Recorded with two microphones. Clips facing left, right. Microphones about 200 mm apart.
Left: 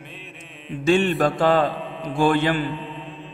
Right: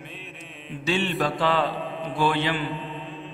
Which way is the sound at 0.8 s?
50° left (ahead or behind).